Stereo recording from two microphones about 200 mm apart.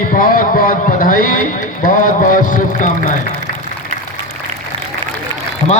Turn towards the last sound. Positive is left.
turn(degrees=25)  # may be behind; listen again after turning